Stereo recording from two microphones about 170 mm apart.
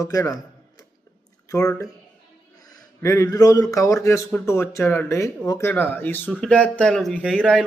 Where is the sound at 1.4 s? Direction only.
20° left (ahead or behind).